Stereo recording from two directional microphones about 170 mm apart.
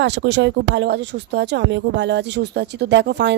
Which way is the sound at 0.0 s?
90° right.